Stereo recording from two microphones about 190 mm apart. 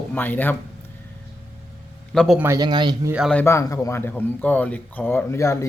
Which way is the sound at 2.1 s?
Centre (ahead or behind).